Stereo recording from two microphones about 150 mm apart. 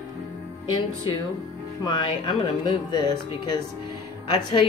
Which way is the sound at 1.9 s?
30° left (ahead or behind).